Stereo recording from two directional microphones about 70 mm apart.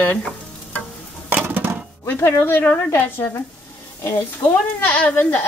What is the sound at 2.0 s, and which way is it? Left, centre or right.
Speech, left.